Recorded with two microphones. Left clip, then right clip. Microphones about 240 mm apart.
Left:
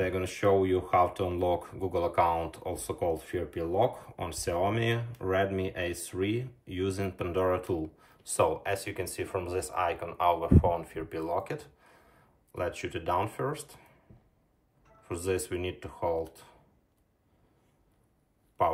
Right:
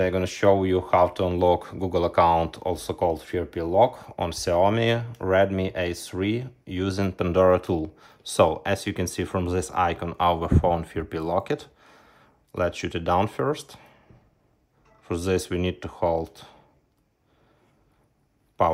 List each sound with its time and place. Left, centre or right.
0.0 s speech: right
7.8 s speech: centre
8.3 s speech: right
15.0 s speech: right